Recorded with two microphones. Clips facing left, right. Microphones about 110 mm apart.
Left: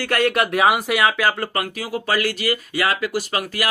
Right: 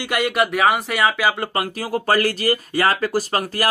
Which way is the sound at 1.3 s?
20° right (ahead or behind).